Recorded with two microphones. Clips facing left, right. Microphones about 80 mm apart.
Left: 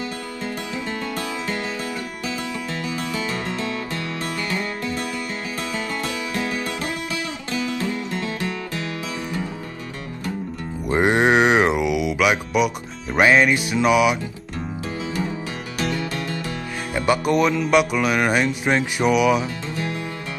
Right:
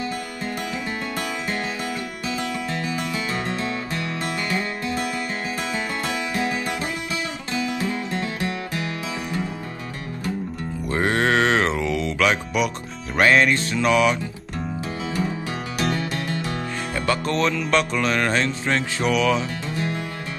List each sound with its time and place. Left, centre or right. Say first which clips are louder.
3.3 s music: even; right
6.0 s music: right 1 dB; right
8.1 s music: even; right
10.9 s music: left 4 dB; centre
15.8 s music: even; right
16.9 s music: left 5 dB; centre